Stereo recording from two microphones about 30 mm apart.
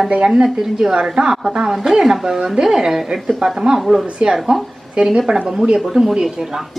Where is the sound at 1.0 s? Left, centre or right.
Right; by 4.0 s centre.